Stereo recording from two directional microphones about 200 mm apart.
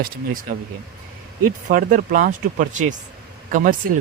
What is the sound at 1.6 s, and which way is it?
Speech, 45° right (ahead or behind).